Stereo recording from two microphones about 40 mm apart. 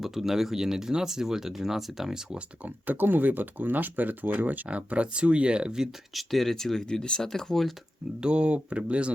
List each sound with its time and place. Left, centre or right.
0.0 s speech: centre
2.6 s speech: right
4.7 s speech: right
6.1 s speech: centre
6.8 s speech: left
8.2 s speech: right